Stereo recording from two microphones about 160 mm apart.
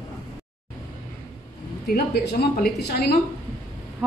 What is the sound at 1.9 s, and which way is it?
A woman's voice, 70° left (ahead or behind).